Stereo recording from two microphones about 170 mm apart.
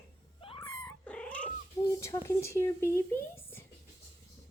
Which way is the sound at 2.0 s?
15° left (ahead or behind).